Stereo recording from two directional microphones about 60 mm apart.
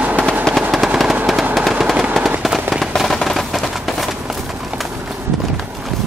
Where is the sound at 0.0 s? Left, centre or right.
Right.